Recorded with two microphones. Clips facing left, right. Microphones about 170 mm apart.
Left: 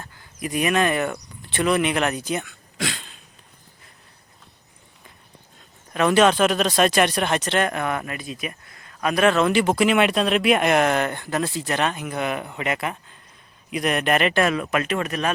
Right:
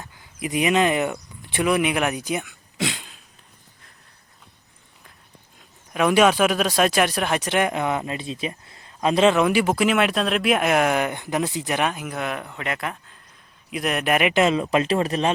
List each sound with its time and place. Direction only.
0.0 s speech: 15° right (ahead or behind)
5.5 s speech: 10° right (ahead or behind); by 15.3 s 30° right (ahead or behind)